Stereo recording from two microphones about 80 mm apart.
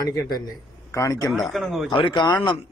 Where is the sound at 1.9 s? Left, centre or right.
Left.